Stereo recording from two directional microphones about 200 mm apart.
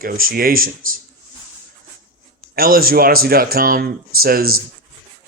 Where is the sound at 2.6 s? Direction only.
45° right (ahead or behind).